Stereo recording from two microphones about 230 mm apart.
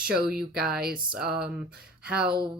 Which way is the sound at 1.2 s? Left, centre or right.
Right.